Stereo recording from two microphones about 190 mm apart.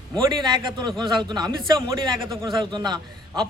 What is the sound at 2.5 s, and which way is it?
Speech, 25° right (ahead or behind).